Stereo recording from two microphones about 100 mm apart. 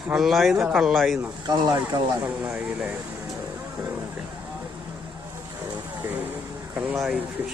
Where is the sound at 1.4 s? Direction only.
45° right (ahead or behind).